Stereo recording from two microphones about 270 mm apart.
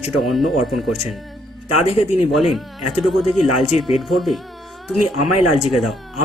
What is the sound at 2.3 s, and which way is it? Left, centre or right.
Speech, centre.